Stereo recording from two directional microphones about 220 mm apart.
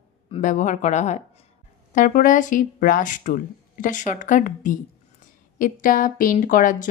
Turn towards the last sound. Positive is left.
turn(degrees=35)  # may be behind; listen again after turning